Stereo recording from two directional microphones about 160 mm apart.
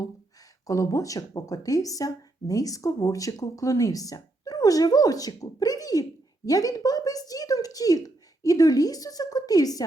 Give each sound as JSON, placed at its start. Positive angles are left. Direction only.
{"t": 0.7, "sound": "speech", "side_deg": 20}